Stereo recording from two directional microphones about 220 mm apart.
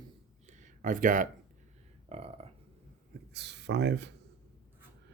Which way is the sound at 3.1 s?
50° right (ahead or behind).